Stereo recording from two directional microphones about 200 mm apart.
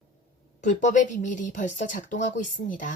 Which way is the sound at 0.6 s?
40° left (ahead or behind).